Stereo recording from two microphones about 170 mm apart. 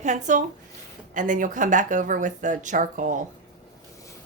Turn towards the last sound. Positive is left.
turn(degrees=-50)  # may be behind; listen again after turning